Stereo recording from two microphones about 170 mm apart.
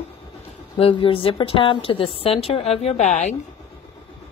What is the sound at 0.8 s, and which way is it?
A woman's voice, 30° left (ahead or behind).